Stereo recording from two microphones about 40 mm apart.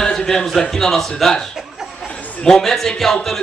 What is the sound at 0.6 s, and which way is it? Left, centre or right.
Speech, centre.